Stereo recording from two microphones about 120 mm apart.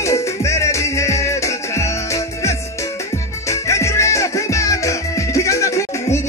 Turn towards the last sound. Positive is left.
turn(degrees=25)  # may be behind; listen again after turning